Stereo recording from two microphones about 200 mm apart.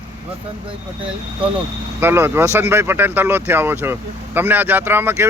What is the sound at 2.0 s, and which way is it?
Speech, 10° right (ahead or behind).